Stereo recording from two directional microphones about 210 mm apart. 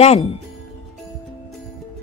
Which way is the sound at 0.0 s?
30° left (ahead or behind).